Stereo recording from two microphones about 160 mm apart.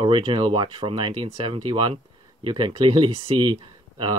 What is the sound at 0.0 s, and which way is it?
Speech, 35° right (ahead or behind).